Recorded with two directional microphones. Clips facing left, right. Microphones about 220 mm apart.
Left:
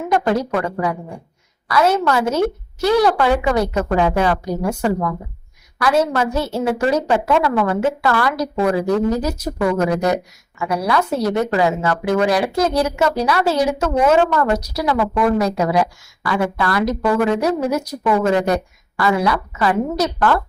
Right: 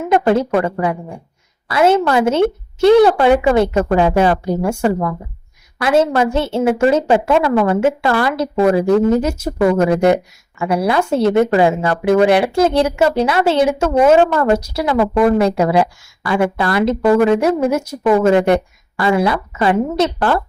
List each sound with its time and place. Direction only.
0.1 s a woman's voice: 25° right (ahead or behind)